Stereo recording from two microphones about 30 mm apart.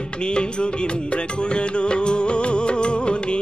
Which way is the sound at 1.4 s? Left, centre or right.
Left.